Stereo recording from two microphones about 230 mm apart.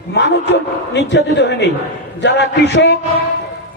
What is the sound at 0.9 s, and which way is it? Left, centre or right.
A man's voice, left.